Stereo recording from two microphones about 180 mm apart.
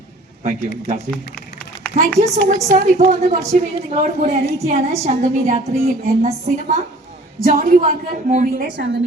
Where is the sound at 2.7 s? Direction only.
40° right (ahead or behind).